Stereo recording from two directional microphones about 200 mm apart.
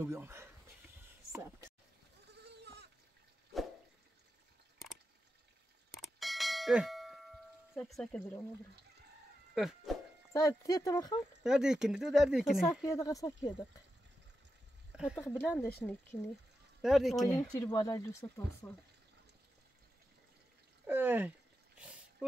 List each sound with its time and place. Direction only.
0.0 s speech: 15° right (ahead or behind)
2.3 s goat: 55° right (ahead or behind)
5.9 s bell: centre (ahead or behind)
9.6 s speech: centre (ahead or behind)
10.3 s speech: 15° left (ahead or behind)
11.4 s speech: 5° right (ahead or behind)
12.8 s speech: 15° left (ahead or behind)
15.1 s speech: 10° left (ahead or behind)
16.8 s speech: centre (ahead or behind)
17.6 s speech: 15° left (ahead or behind)
20.8 s speech: 10° right (ahead or behind)
21.7 s a sound: 5° right (ahead or behind)